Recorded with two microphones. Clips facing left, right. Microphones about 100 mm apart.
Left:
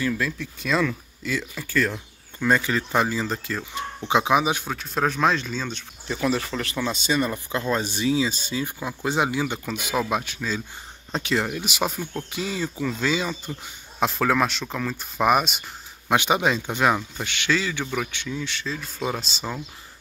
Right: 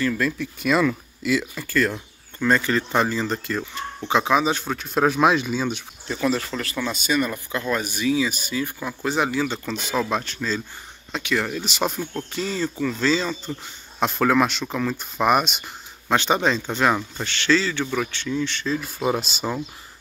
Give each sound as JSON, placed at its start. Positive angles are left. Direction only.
{"t": 0.0, "sound": "speech", "side_deg": 0}
{"t": 4.1, "sound": "speech", "side_deg": 15}
{"t": 4.6, "sound": "speech", "side_deg": 0}
{"t": 6.0, "sound": "speech", "side_deg": 10}
{"t": 6.6, "sound": "speech", "side_deg": 20}
{"t": 11.1, "sound": "speech", "side_deg": 35}
{"t": 11.3, "sound": "speech", "side_deg": 10}
{"t": 18.9, "sound": "speech", "side_deg": -10}